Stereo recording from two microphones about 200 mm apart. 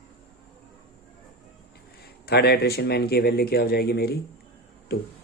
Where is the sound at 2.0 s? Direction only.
50° left (ahead or behind).